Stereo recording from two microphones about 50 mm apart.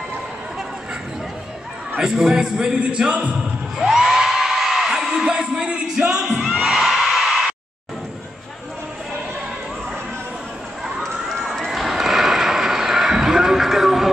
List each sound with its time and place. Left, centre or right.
2.0 s speech: centre
3.7 s whoop: centre
6.6 s neigh: centre
11.0 s a sound: centre